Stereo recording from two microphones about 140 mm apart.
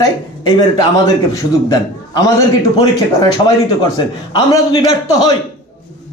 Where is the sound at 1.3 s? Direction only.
25° left (ahead or behind).